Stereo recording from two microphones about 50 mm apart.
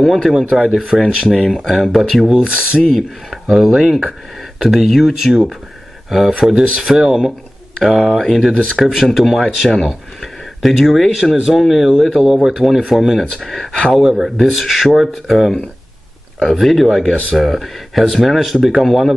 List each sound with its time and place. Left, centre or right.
0.0 s speech: centre
0.3 s speech: centre
1.3 s speech: centre
2.4 s speech: right
2.8 s speech: centre
3.4 s speech: centre
14.0 s speech: centre
14.4 s speech: centre